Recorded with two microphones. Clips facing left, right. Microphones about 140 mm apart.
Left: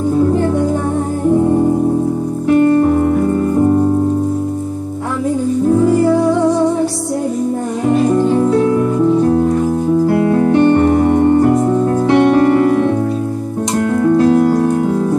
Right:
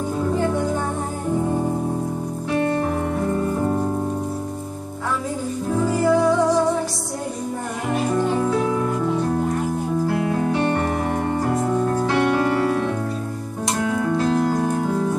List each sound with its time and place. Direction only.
10.1 s music: 55° left (ahead or behind)
12.1 s music: 60° left (ahead or behind)